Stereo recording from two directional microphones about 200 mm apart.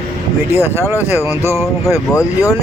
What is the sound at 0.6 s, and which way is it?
Speech, 15° left (ahead or behind).